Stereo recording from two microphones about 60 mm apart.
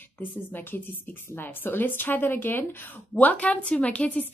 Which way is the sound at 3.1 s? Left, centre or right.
Left.